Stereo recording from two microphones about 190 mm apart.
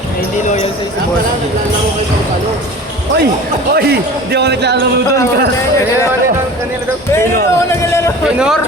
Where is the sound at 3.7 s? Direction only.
55° right (ahead or behind).